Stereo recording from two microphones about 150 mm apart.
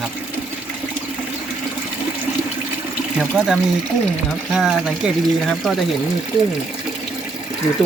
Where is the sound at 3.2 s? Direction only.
5° right (ahead or behind).